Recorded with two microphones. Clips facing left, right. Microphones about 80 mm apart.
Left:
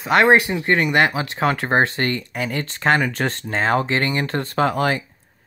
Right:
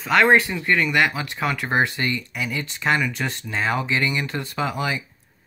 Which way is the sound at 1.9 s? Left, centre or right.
Left.